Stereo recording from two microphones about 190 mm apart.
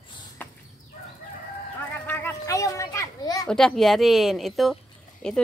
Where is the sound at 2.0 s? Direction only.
10° left (ahead or behind).